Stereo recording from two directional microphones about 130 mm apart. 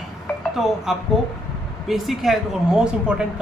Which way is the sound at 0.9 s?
5° right (ahead or behind).